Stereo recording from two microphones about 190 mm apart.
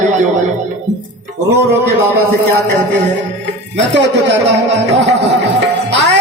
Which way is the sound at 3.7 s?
65° right (ahead or behind).